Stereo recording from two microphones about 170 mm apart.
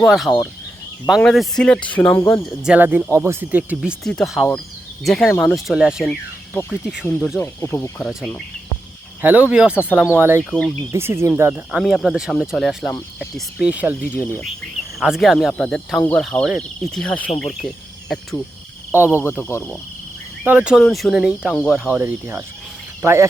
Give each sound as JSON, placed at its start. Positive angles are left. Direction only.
{"t": 0.0, "sound": "speech", "side_deg": 0}
{"t": 2.6, "sound": "speech", "side_deg": -5}
{"t": 6.5, "sound": "speech", "side_deg": 15}
{"t": 9.2, "sound": "speech", "side_deg": -10}
{"t": 10.5, "sound": "speech", "side_deg": 5}
{"t": 10.9, "sound": "speech", "side_deg": -15}
{"t": 11.8, "sound": "speech", "side_deg": 0}
{"t": 18.9, "sound": "speech", "side_deg": -10}
{"t": 19.4, "sound": "speech", "side_deg": 15}
{"t": 20.4, "sound": "speech", "side_deg": -5}